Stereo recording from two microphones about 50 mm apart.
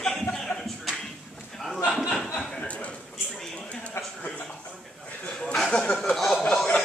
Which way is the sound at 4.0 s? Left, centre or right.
Left.